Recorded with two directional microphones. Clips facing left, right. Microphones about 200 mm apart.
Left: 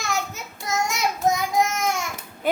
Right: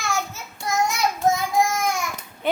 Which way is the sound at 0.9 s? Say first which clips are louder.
Even; 20° left (ahead or behind).